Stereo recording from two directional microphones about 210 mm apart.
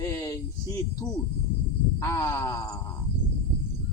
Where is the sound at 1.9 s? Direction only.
15° left (ahead or behind).